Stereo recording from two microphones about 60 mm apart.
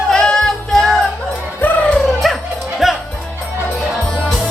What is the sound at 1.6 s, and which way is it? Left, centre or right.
Music, left.